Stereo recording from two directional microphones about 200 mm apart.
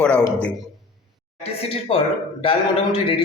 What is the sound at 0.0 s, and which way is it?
Speech, 5° left (ahead or behind).